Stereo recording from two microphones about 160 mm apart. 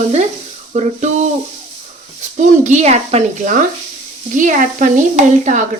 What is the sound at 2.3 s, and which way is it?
Stir, 50° right (ahead or behind).